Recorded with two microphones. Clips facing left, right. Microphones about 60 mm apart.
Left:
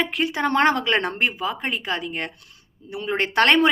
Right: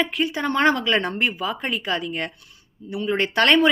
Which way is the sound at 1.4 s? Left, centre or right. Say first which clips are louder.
Even; left.